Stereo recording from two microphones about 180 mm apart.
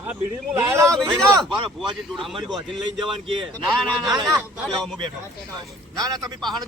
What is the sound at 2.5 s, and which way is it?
Speech, 25° right (ahead or behind).